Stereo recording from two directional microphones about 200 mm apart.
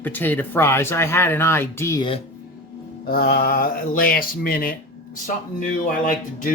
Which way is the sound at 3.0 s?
50° left (ahead or behind).